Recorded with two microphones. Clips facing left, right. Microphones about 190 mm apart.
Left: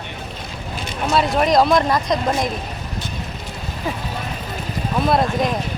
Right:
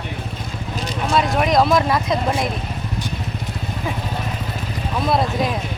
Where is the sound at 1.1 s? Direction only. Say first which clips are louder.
Left 1 dB; centre (ahead or behind).